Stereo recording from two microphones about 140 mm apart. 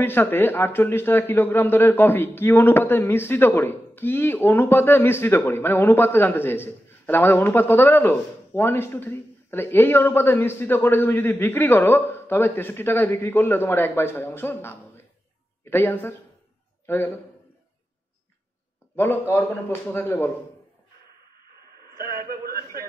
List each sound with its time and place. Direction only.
0.0 s a man's voice: 15° left (ahead or behind)
18.9 s a man's voice: 15° left (ahead or behind)
22.1 s a sound: 90° right